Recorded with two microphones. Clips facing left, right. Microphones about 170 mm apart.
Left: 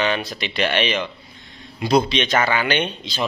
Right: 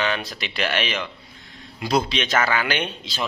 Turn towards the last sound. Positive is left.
turn(degrees=0)  # may be behind; listen again after turning